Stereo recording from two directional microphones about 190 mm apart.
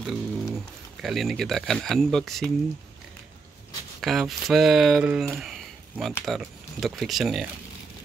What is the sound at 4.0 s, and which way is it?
Speech, centre (ahead or behind).